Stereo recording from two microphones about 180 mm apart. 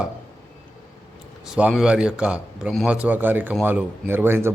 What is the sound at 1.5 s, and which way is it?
A man's voice, 5° right (ahead or behind).